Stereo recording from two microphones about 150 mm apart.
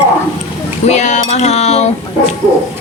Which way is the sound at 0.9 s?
50° left (ahead or behind).